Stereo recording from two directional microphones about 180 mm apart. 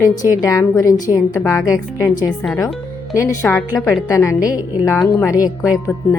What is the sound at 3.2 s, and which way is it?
A woman's voice, 15° left (ahead or behind).